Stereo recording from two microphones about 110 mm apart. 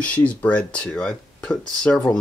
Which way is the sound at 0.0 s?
10° left (ahead or behind).